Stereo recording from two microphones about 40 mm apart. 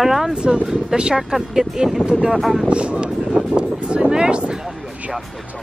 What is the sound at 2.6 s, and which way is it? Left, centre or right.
Speech, right.